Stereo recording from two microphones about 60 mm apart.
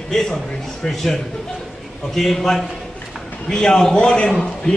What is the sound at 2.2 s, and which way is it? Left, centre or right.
A man's voice, centre.